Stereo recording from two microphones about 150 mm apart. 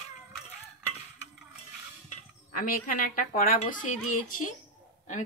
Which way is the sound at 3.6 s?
55° left (ahead or behind).